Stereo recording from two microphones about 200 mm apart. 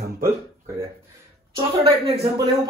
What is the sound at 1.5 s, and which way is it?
A woman's voice, 30° right (ahead or behind).